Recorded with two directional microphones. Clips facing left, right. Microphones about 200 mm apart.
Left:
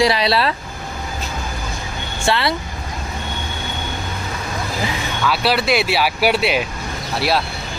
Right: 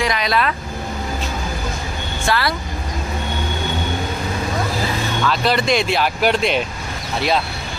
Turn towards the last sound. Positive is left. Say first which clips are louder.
# even
turn(degrees=5)  # may be behind; listen again after turning